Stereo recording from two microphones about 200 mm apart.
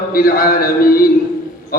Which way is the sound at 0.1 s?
45° left (ahead or behind).